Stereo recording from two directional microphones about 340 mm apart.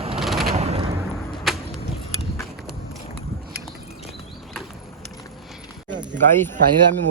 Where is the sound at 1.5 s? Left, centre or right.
Centre.